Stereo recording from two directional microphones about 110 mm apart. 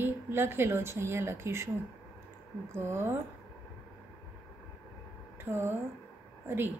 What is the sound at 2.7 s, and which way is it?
Speech, 20° right (ahead or behind).